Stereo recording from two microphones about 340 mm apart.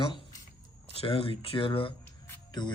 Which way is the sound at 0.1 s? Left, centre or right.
Centre.